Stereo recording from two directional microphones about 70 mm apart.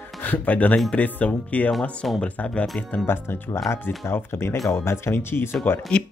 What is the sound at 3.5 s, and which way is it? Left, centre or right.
Speech, left.